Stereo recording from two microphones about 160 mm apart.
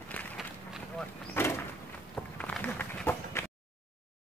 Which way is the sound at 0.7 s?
5° left (ahead or behind).